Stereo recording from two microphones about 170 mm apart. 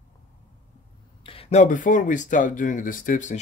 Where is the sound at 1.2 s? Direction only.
45° left (ahead or behind).